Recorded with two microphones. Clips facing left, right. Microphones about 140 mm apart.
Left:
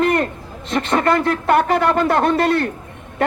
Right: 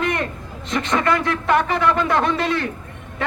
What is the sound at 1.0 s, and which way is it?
A man's voice, 45° left (ahead or behind).